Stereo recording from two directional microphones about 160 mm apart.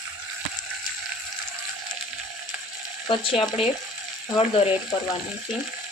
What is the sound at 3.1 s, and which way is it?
Speech, 35° left (ahead or behind).